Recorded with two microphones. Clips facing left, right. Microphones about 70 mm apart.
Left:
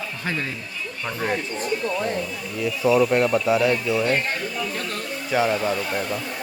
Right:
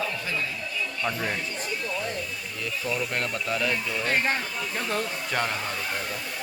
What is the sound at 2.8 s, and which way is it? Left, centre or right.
Speech, left.